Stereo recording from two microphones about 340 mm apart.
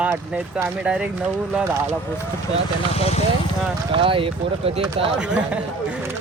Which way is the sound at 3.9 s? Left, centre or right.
Centre.